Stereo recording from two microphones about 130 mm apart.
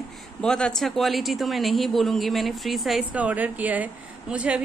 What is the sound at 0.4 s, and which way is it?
Speech, 5° left (ahead or behind).